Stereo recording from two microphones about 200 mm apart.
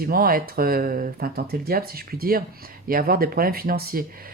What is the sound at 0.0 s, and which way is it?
Speech, 45° right (ahead or behind).